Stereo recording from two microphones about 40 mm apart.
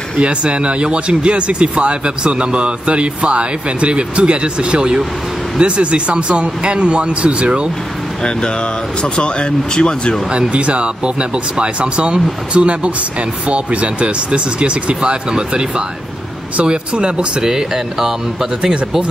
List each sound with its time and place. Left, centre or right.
0.2 s speech: right
9.0 s speech: left
10.3 s speech: right
16.6 s speech: right